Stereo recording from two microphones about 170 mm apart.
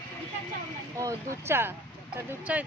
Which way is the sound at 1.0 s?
15° right (ahead or behind).